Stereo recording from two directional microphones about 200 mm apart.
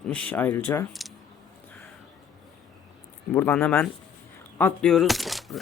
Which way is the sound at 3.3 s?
10° left (ahead or behind).